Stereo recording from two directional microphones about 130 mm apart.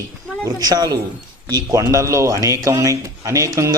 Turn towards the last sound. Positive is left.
turn(degrees=-25)  # may be behind; listen again after turning